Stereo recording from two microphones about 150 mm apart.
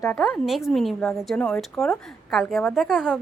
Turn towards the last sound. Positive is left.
turn(degrees=0)  # may be behind; listen again after turning